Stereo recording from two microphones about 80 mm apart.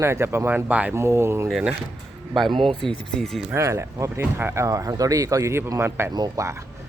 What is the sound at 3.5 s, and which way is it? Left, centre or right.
Speech, right.